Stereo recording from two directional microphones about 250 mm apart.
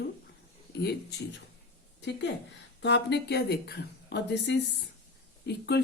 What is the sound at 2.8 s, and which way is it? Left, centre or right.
Speech, left.